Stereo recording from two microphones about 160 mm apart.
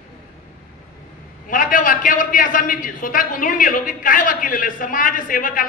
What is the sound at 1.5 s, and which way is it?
A man's voice, 60° left (ahead or behind).